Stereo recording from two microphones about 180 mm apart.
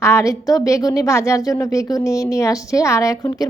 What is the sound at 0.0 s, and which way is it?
A woman's voice, 15° left (ahead or behind).